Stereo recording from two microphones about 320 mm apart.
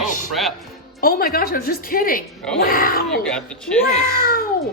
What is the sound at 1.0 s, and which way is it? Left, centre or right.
A woman's voice, left.